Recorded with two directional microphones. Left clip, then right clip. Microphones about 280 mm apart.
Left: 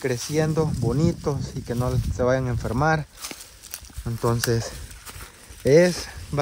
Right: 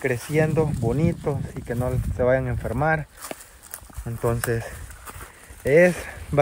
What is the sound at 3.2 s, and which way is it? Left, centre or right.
Walk, centre.